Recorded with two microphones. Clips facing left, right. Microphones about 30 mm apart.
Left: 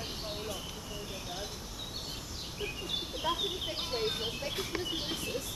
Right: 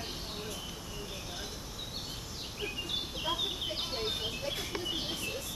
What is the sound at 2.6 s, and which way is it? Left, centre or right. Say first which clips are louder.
Bird: right 1 dB; centre.